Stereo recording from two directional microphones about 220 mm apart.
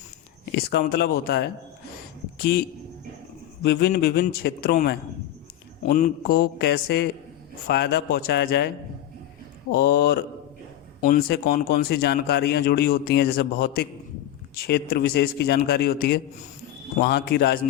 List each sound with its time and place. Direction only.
0.5 s speech: 45° left (ahead or behind)
9.7 s speech: 45° left (ahead or behind)